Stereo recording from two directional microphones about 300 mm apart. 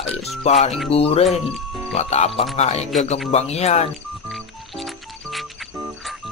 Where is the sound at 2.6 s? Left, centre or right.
Left.